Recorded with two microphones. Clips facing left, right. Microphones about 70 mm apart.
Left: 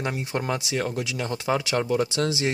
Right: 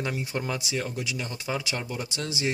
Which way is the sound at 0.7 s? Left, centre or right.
Left.